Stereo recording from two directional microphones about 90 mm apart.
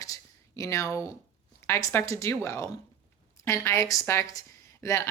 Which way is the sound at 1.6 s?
30° left (ahead or behind).